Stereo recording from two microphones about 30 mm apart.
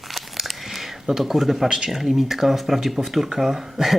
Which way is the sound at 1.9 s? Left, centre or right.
Centre.